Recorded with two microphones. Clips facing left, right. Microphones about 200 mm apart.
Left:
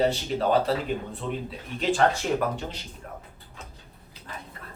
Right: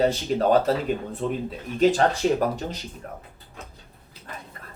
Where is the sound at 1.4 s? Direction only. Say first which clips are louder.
Right 9 dB; 45° right (ahead or behind).